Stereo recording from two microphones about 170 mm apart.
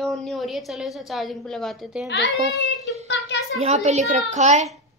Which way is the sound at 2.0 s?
90° left.